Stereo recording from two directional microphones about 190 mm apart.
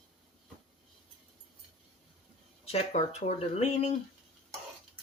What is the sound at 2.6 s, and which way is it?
Speech, 30° left (ahead or behind).